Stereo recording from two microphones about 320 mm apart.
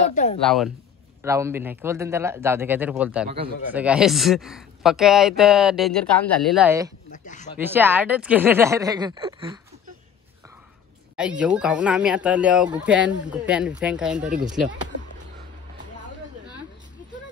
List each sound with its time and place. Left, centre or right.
0.1 s speech: left
0.4 s speech: centre
3.3 s speech: right
3.7 s speech: centre
7.1 s speech: left
7.5 s speech: centre
11.1 s speech: centre
14.3 s speech: right